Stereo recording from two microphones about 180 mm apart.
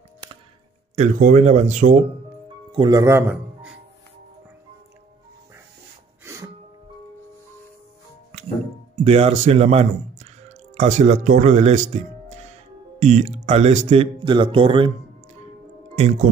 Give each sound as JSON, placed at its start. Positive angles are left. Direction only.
{"t": 0.9, "sound": "speech", "side_deg": -40}
{"t": 2.7, "sound": "speech", "side_deg": -25}
{"t": 6.2, "sound": "music", "side_deg": -15}
{"t": 9.0, "sound": "speech", "side_deg": -35}